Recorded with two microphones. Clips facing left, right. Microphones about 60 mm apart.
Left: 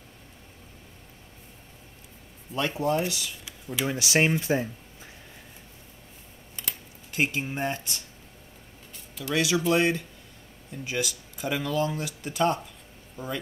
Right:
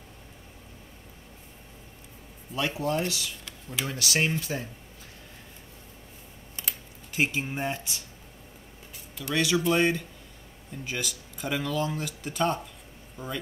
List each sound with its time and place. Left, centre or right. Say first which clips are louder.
2.5 s speech: left 2 dB; centre
3.8 s speech: left 4 dB; centre
6.5 s typing: even; centre
9.2 s speech: even; centre